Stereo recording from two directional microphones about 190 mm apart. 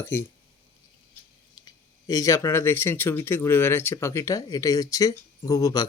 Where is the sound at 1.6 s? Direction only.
20° left (ahead or behind).